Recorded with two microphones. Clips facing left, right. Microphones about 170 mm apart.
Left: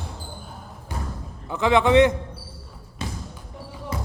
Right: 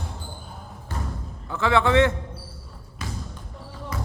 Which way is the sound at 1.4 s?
15° left (ahead or behind).